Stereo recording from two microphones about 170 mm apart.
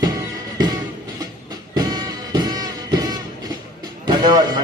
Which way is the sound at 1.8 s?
25° right (ahead or behind).